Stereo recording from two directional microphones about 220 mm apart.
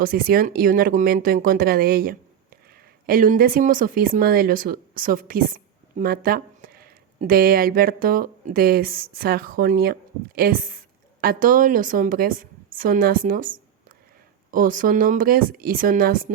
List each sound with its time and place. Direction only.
0.0 s speech: 40° right (ahead or behind)